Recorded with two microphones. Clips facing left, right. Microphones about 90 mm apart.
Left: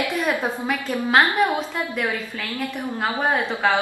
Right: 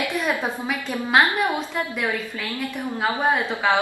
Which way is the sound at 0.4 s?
Centre (ahead or behind).